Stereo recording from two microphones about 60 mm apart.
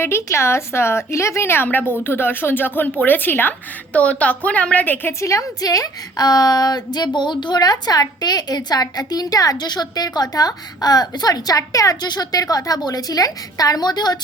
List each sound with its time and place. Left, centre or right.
0.0 s a woman's voice: left
3.9 s a woman's voice: left
5.2 s a woman's voice: left